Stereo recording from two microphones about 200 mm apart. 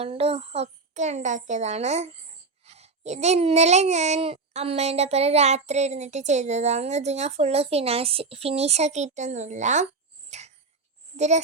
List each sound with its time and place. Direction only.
0.0 s a child's voice: 30° right (ahead or behind)
10.2 s a sound: 35° right (ahead or behind)
11.2 s a child's voice: 35° right (ahead or behind)